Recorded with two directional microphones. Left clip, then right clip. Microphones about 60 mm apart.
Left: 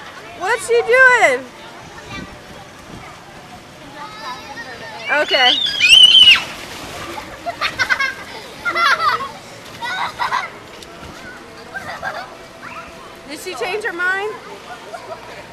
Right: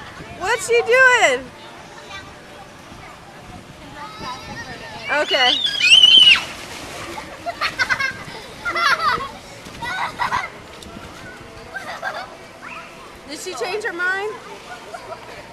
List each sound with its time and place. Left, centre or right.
0.4 s speech: centre
4.2 s a sound: centre
9.8 s splash: centre
11.8 s music: right
13.3 s speech: centre